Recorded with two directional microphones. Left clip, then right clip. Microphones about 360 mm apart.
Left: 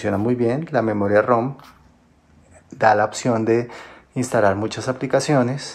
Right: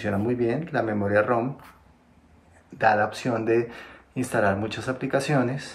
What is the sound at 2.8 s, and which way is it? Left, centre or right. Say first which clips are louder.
Speech: left 5 dB; centre.